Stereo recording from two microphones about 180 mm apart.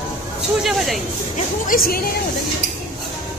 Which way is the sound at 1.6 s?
55° left (ahead or behind).